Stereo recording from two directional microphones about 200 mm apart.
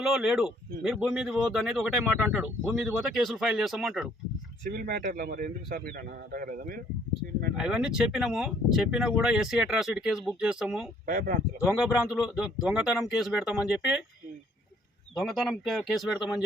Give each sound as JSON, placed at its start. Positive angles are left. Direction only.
{"t": 0.0, "sound": "speech", "side_deg": -5}
{"t": 4.6, "sound": "a man's voice", "side_deg": -45}
{"t": 7.5, "sound": "speech", "side_deg": -5}
{"t": 11.0, "sound": "a man's voice", "side_deg": -45}
{"t": 11.6, "sound": "speech", "side_deg": -5}
{"t": 15.1, "sound": "speech", "side_deg": 0}